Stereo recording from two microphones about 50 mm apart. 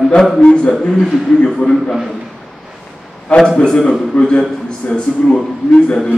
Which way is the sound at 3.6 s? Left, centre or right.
Centre.